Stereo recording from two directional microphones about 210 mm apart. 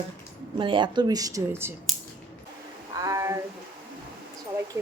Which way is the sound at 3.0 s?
15° right (ahead or behind).